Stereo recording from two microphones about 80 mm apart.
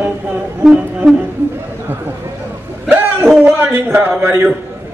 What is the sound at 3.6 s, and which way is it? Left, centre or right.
Speech, right.